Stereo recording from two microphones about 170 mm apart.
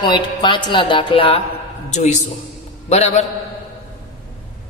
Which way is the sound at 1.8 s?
45° left (ahead or behind).